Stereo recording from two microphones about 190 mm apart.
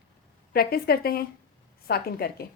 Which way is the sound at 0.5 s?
50° left (ahead or behind).